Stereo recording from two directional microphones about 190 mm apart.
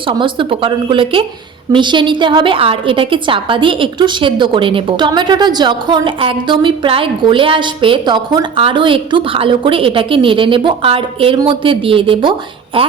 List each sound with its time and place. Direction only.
0.1 s a woman's voice: 25° right (ahead or behind)